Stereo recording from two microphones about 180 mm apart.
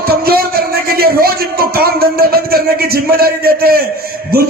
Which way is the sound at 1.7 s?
60° right (ahead or behind).